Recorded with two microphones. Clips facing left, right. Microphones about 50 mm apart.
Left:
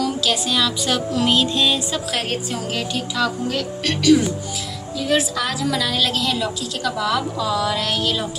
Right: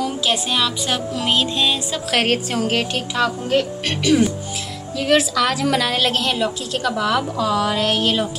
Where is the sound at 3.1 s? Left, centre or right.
Right.